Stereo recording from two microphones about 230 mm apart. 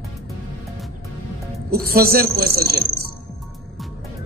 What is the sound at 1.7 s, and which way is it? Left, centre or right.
Speech, right.